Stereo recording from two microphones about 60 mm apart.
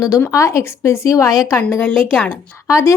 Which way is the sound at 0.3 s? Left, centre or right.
Left.